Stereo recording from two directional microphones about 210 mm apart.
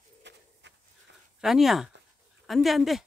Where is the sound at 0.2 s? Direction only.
55° right (ahead or behind).